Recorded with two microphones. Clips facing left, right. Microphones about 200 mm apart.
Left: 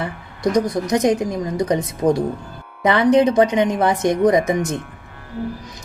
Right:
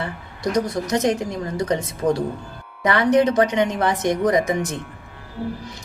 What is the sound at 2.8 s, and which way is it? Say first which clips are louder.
Speech: left 3 dB; 20° left (ahead or behind).